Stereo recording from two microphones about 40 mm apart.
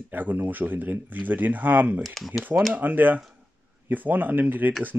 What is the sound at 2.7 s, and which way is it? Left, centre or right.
Speech, right.